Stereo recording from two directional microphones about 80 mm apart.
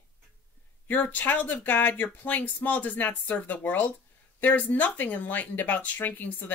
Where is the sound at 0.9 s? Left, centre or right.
Left.